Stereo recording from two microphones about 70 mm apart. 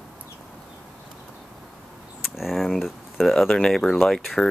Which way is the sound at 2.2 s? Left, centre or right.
Centre.